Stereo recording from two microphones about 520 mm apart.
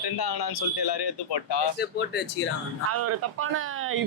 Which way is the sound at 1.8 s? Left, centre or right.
Centre.